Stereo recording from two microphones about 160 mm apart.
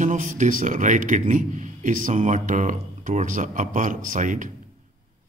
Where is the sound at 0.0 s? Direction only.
50° right (ahead or behind).